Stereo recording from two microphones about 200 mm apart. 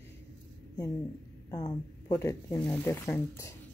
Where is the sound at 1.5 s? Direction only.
20° left (ahead or behind).